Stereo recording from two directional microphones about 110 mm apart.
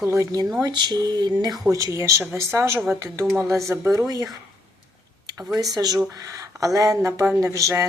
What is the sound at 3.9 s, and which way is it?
Speech, 35° right (ahead or behind).